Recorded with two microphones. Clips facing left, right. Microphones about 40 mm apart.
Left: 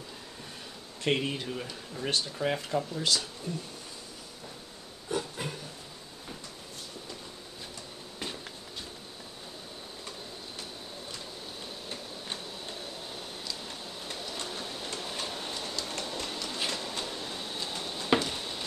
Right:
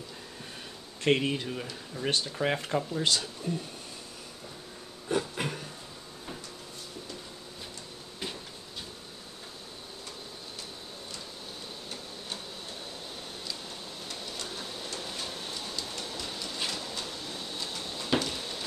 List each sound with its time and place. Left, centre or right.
1.0 s speech: centre
2.0 s speech: centre
5.4 s a sound: right
14.0 s printer: left
15.1 s train: centre
15.9 s train: left
16.3 s train: centre
17.8 s a sound: centre